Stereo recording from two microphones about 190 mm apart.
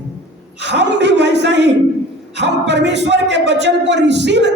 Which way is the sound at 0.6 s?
65° right (ahead or behind).